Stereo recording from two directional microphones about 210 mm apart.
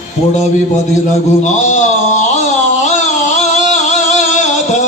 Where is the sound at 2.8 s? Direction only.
35° left (ahead or behind).